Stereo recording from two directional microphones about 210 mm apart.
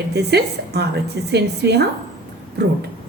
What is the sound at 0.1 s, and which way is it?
A woman's voice, 50° right (ahead or behind).